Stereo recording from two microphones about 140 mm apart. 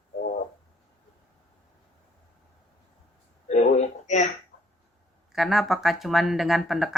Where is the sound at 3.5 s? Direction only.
55° left (ahead or behind).